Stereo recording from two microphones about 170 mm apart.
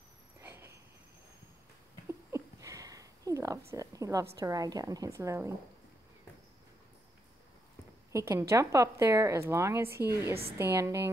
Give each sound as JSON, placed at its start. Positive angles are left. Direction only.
{"t": 0.4, "sound": "a sound", "side_deg": -15}
{"t": 2.0, "sound": "a sound", "side_deg": -15}
{"t": 4.4, "sound": "a woman's voice", "side_deg": -20}
{"t": 8.1, "sound": "speech", "side_deg": -15}
{"t": 9.8, "sound": "a woman's voice", "side_deg": -65}
{"t": 10.1, "sound": "speech", "side_deg": -15}